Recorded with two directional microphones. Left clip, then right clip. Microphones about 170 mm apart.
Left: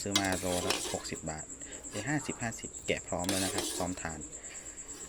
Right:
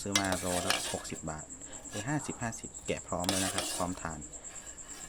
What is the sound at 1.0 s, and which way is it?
Cricket, 25° right (ahead or behind).